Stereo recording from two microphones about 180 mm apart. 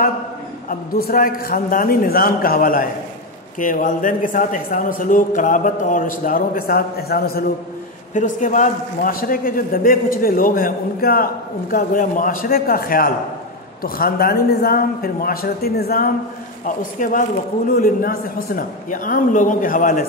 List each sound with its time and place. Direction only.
0.7 s a man's voice: 55° left (ahead or behind)
8.1 s a man's voice: 45° left (ahead or behind); by 16.1 s 60° left (ahead or behind)
16.6 s a man's voice: 45° left (ahead or behind)